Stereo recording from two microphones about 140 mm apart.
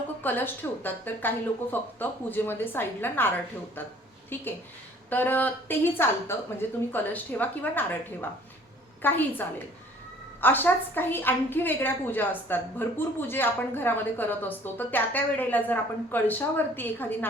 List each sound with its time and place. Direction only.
0.2 s a woman's voice: 15° left (ahead or behind)